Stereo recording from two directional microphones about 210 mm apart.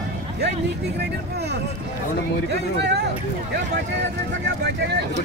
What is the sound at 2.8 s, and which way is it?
Speech, 55° right (ahead or behind).